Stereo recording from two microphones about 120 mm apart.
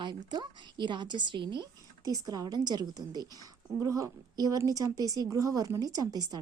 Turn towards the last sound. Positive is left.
turn(degrees=-30)  # may be behind; listen again after turning